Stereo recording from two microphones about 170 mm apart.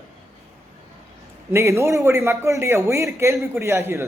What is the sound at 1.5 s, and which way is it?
A man's voice, 15° right (ahead or behind).